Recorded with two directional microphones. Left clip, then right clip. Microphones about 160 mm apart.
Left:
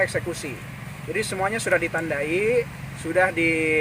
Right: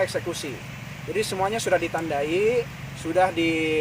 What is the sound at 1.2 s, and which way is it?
Speech, 5° left (ahead or behind).